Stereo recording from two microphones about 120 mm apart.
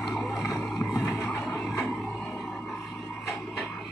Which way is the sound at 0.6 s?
10° left (ahead or behind).